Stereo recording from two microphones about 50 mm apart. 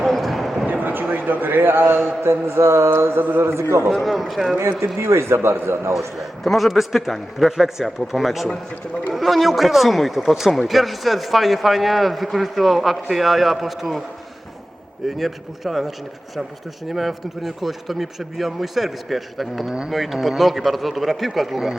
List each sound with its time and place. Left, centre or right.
0.0 s a sound: centre
0.7 s a sound: right
2.2 s mantra: right
4.0 s speech: centre
4.9 s mantra: right
6.1 s speech: centre
15.2 s speech: centre
16.9 s speech: centre